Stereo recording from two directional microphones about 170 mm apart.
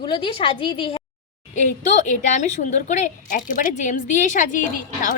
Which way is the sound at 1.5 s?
45° left (ahead or behind).